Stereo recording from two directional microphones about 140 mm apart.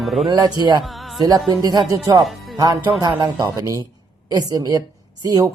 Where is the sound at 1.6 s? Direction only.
30° right (ahead or behind).